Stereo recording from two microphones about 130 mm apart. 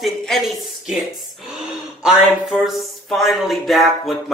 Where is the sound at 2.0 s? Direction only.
5° right (ahead or behind).